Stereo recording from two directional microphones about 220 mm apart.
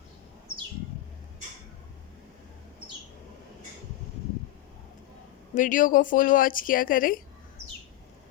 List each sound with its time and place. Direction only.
5.5 s speech: 35° left (ahead or behind)